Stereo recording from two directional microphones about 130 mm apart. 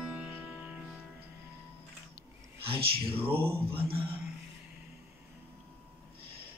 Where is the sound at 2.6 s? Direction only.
45° right (ahead or behind).